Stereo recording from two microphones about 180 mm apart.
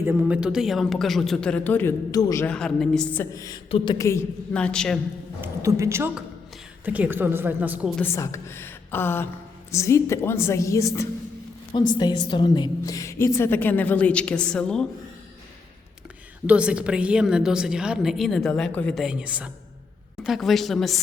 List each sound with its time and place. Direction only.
0.0 s a woman's voice: 10° right (ahead or behind); by 2.5 s 15° left (ahead or behind)
2.5 s a woman's voice: 5° left (ahead or behind)
5.4 s a woman's voice: 15° right (ahead or behind)
7.9 s a woman's voice: 15° left (ahead or behind)
16.5 s a woman's voice: 5° right (ahead or behind)